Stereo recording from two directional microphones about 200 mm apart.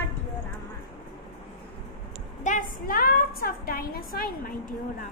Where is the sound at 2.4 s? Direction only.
40° left (ahead or behind).